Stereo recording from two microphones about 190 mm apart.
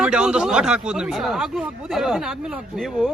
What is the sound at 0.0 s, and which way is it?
Speech, 5° right (ahead or behind).